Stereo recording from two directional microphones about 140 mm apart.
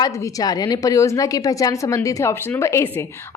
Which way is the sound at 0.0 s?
30° left (ahead or behind).